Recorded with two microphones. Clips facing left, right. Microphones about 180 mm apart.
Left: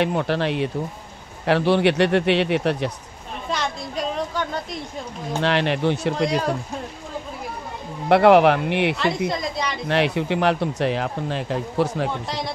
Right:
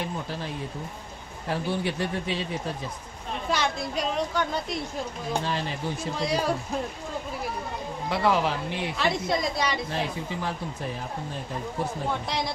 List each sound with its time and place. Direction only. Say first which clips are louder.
0.0 s speech: left 11 dB; 75° left (ahead or behind)
3.4 s a woman's voice: even; centre (ahead or behind)
5.4 s speech: left 10 dB; 75° left (ahead or behind)
8.1 s speech: left 11 dB; 65° left (ahead or behind)
9.3 s a woman's voice: even; centre (ahead or behind)
9.8 s speech: left 10 dB; 75° left (ahead or behind); by 12.1 s 90° left
12.3 s a woman's voice: left 1 dB; centre (ahead or behind)